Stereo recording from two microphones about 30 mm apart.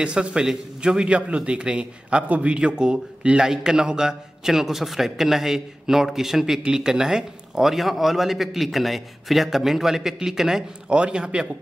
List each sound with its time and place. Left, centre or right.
0.0 s a man's voice: right
2.2 s a man's voice: right
2.5 s a man's voice: right; by 7.6 s centre
7.6 s a man's voice: centre
10.9 s a man's voice: right